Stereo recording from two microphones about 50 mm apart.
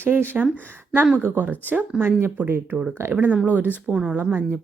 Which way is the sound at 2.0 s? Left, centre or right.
Right.